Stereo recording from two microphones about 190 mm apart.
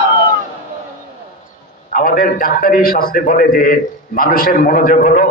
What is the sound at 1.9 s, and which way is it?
A man's voice, 45° left (ahead or behind).